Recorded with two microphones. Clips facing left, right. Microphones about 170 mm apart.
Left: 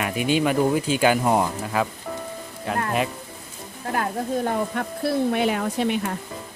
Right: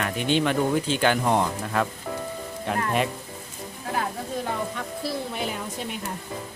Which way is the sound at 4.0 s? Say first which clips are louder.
Left 5 dB; 55° left (ahead or behind).